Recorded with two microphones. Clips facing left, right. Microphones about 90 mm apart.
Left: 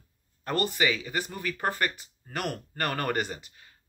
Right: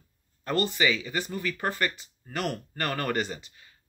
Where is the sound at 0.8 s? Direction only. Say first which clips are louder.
Right 1 dB; 45° left (ahead or behind).